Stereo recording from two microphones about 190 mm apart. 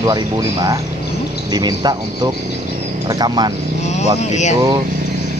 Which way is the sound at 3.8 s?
35° left (ahead or behind).